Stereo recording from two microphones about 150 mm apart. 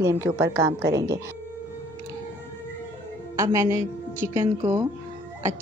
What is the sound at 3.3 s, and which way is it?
A woman's voice, 20° right (ahead or behind).